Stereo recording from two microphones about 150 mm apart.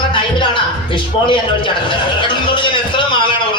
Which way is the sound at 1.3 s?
35° left (ahead or behind).